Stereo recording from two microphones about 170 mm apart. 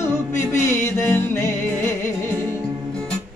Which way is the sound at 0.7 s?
15° left (ahead or behind).